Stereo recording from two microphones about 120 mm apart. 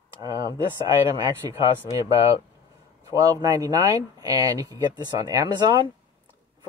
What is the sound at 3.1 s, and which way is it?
Speech, 30° right (ahead or behind).